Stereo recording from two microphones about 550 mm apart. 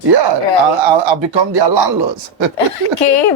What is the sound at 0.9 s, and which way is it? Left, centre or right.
Speech, right.